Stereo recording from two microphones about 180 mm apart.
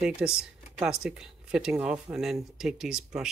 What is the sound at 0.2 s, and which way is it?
Speech, 5° right (ahead or behind).